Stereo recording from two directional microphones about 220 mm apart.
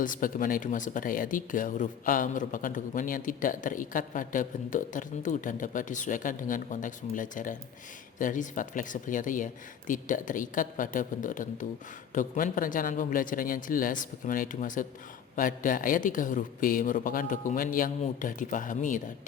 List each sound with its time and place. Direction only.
0.0 s speech: 40° left (ahead or behind)